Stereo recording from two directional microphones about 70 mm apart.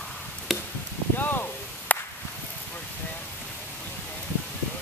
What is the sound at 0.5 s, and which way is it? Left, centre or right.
Chop, centre.